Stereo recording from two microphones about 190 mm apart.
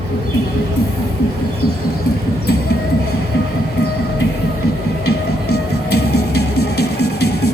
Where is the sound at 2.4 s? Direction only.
55° left (ahead or behind).